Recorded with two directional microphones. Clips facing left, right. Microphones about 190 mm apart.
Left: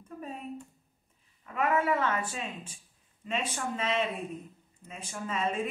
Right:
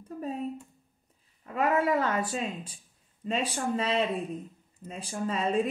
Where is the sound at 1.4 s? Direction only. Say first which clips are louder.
Right 2 dB; 35° right (ahead or behind).